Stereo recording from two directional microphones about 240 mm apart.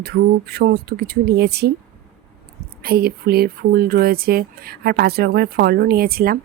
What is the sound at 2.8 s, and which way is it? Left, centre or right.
Speech, right.